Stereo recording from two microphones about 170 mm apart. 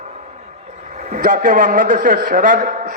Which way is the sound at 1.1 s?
55° right (ahead or behind).